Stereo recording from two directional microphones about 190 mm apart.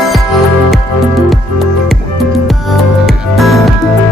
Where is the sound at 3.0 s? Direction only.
Centre (ahead or behind).